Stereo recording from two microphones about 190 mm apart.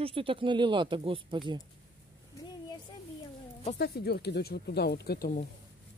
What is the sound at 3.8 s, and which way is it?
Speech, 55° left (ahead or behind).